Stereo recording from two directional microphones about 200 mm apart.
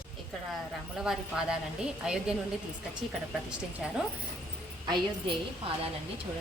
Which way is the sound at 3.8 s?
Centre (ahead or behind).